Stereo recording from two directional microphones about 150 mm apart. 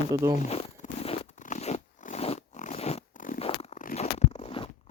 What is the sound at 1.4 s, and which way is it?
Zipper, 50° left (ahead or behind).